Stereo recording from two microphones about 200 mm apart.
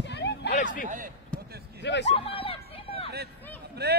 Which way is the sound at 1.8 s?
60° left (ahead or behind).